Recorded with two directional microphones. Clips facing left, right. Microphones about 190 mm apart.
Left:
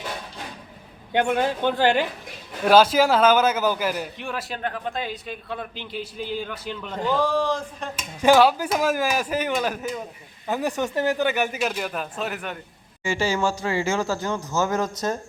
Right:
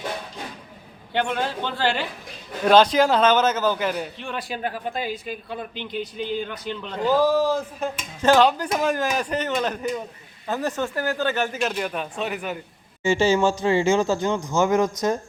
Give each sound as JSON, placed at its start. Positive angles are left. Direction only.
{"t": 1.3, "sound": "a man's voice", "side_deg": 15}
{"t": 7.2, "sound": "a man's voice", "side_deg": -5}
{"t": 8.2, "sound": "speech", "side_deg": 10}
{"t": 13.0, "sound": "speech", "side_deg": -25}